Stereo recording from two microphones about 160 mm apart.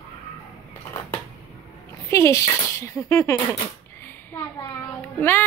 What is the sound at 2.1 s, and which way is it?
Speech, 20° left (ahead or behind).